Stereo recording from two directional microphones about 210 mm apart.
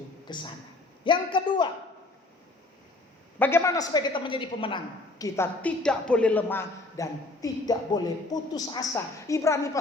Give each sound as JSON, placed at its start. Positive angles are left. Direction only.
{"t": 0.3, "sound": "a man's voice", "side_deg": 20}
{"t": 3.3, "sound": "a man's voice", "side_deg": 10}